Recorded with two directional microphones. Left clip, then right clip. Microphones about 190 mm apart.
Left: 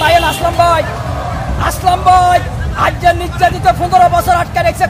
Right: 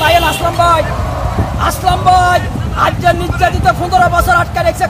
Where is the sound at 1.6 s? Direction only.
30° left (ahead or behind).